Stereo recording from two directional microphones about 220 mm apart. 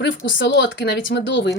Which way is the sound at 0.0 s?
55° left (ahead or behind).